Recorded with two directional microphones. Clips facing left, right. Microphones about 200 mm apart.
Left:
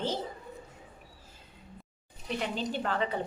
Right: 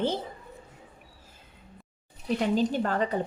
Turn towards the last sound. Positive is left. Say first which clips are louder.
# right 4 dB
turn(degrees=-45)  # may be behind; listen again after turning